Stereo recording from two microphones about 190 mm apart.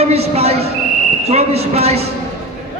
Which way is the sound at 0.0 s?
35° right (ahead or behind).